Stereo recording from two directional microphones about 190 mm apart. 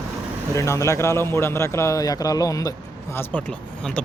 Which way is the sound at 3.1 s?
5° left (ahead or behind).